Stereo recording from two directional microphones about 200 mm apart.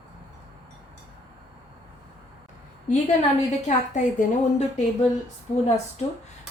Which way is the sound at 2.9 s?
40° left (ahead or behind).